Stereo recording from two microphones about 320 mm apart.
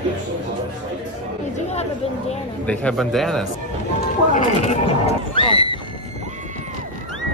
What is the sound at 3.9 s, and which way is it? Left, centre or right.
Speech, left.